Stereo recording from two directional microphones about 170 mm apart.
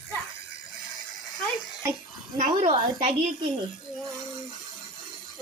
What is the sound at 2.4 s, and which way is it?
Speech, 45° right (ahead or behind).